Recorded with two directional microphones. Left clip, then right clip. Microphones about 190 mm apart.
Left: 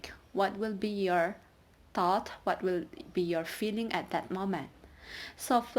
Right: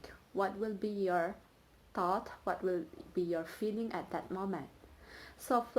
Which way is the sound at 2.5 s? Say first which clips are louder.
Left 4 dB; 60° left (ahead or behind).